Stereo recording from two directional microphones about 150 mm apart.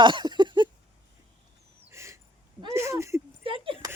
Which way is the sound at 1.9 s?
20° right (ahead or behind).